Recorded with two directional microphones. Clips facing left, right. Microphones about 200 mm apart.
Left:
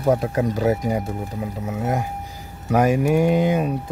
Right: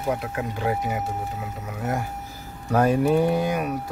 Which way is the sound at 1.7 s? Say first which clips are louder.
Left 3 dB; 20° left (ahead or behind).